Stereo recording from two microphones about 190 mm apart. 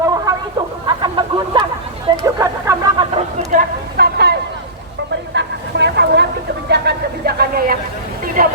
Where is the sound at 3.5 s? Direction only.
55° right (ahead or behind).